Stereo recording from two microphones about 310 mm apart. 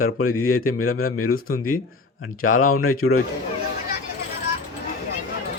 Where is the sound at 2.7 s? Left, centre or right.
Left.